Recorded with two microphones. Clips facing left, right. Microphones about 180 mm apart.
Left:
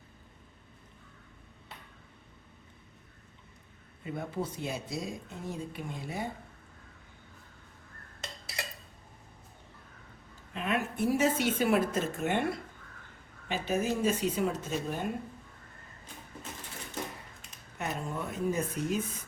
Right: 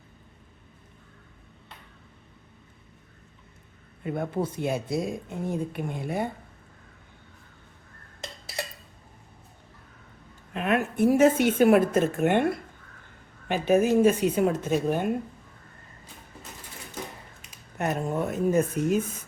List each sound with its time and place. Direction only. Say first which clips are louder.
4.0 s a woman's voice: right 7 dB; 55° right (ahead or behind)
10.5 s a woman's voice: right 6 dB; 60° right (ahead or behind)
17.7 s speech: right 8 dB; 50° right (ahead or behind)